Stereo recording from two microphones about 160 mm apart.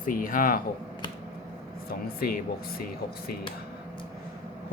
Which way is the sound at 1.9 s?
70° left (ahead or behind).